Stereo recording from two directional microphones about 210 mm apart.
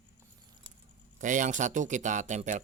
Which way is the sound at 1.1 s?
35° right (ahead or behind).